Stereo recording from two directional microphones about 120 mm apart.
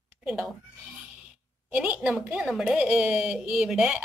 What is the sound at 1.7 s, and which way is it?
A woman's voice, 10° right (ahead or behind).